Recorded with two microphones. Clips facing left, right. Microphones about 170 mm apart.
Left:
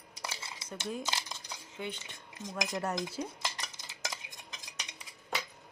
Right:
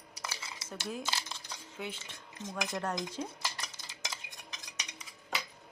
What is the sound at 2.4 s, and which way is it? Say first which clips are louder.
Speech: left 1 dB; 15° left (ahead or behind).